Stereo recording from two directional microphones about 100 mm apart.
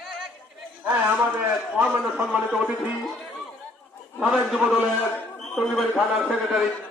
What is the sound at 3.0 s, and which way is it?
A man's voice, centre (ahead or behind).